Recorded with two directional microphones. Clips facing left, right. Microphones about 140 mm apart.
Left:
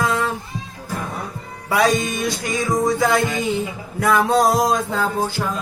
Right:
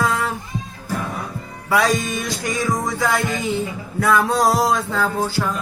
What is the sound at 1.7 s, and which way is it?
Music, 20° left (ahead or behind).